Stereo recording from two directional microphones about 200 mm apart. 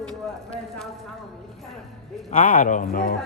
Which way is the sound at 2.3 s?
40° left (ahead or behind).